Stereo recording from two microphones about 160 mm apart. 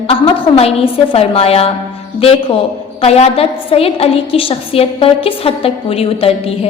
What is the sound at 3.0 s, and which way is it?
A woman's voice, 40° left (ahead or behind).